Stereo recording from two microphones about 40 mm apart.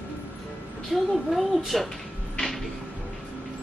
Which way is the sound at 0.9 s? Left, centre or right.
Centre.